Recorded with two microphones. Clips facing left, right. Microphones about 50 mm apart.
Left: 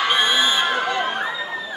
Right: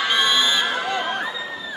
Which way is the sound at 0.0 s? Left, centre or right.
Centre.